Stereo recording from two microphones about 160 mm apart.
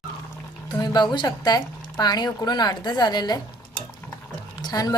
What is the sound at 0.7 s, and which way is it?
Speech, 25° left (ahead or behind).